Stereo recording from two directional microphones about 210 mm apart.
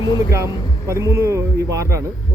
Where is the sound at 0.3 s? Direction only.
15° right (ahead or behind).